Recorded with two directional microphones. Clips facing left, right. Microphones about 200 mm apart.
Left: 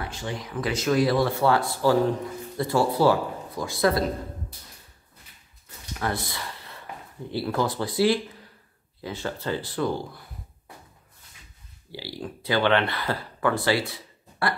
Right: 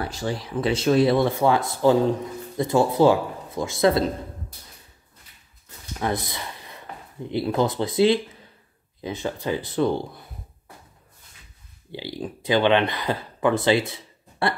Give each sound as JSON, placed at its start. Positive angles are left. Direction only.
{"t": 0.0, "sound": "speech", "side_deg": -35}
{"t": 5.9, "sound": "speech", "side_deg": -20}
{"t": 11.9, "sound": "speech", "side_deg": -20}